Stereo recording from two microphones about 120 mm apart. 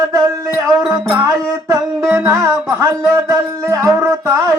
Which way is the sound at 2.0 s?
5° right (ahead or behind).